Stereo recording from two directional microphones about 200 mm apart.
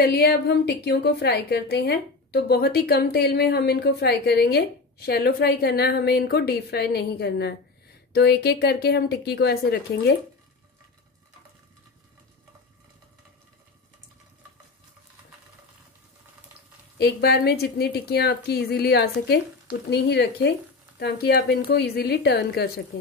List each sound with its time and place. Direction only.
0.0 s a woman's voice: 50° left (ahead or behind)
17.0 s a woman's voice: 55° left (ahead or behind)